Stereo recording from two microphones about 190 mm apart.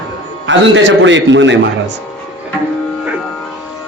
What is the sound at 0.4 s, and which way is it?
A man's voice, 75° right (ahead or behind).